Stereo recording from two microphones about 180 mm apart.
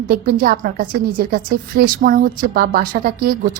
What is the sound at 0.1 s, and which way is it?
A woman's voice, 55° right (ahead or behind).